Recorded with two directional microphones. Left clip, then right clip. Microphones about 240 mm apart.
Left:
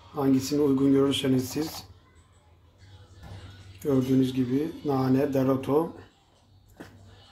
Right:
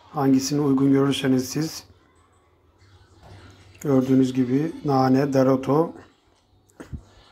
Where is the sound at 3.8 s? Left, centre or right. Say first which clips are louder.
Right 5 dB; centre.